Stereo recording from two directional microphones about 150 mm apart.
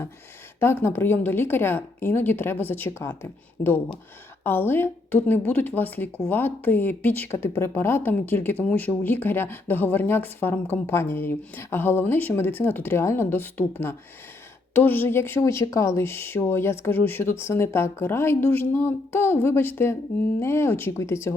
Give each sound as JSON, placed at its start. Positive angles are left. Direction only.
{"t": 0.6, "sound": "speech", "side_deg": 15}